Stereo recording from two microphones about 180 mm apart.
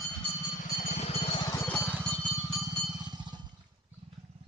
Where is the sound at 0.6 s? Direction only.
45° left (ahead or behind).